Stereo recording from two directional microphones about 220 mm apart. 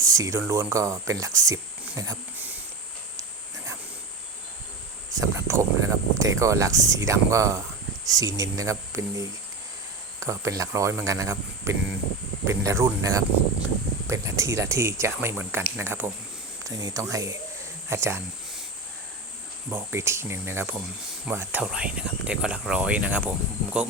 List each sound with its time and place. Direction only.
0.0 s speech: 15° right (ahead or behind)
5.1 s speech: 15° right (ahead or behind)
17.8 s a sound: 10° right (ahead or behind)
19.7 s speech: 10° right (ahead or behind)